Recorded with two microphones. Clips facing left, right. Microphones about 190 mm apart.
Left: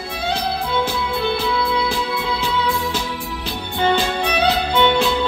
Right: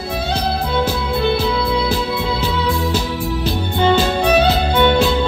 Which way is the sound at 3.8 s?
40° right (ahead or behind).